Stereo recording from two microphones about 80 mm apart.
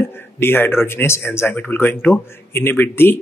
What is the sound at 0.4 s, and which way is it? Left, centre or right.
Speech, left.